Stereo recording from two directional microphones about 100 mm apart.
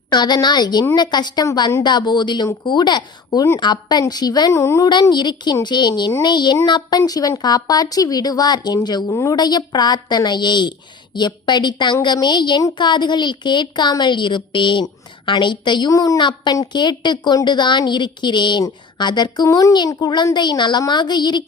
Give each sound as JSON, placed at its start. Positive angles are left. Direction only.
{"t": 0.1, "sound": "a woman's voice", "side_deg": 45}
{"t": 4.5, "sound": "a woman's voice", "side_deg": 25}
{"t": 4.9, "sound": "a woman's voice", "side_deg": 50}
{"t": 9.0, "sound": "a woman's voice", "side_deg": 30}
{"t": 9.3, "sound": "a woman's voice", "side_deg": 45}
{"t": 15.9, "sound": "a woman's voice", "side_deg": 35}
{"t": 16.2, "sound": "a woman's voice", "side_deg": 50}
{"t": 19.5, "sound": "a woman's voice", "side_deg": 30}
{"t": 19.9, "sound": "a woman's voice", "side_deg": 45}